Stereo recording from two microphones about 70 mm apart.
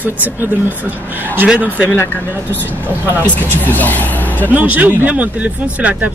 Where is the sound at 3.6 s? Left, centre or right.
Left.